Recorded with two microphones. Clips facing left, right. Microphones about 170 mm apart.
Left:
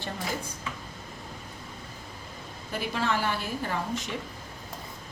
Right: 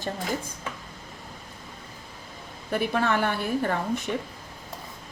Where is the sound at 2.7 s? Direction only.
55° right (ahead or behind).